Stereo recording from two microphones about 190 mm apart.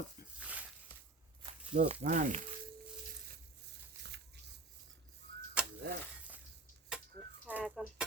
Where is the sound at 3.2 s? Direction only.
55° right (ahead or behind).